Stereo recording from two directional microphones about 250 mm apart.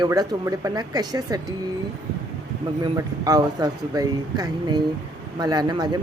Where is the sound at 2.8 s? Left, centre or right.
Centre.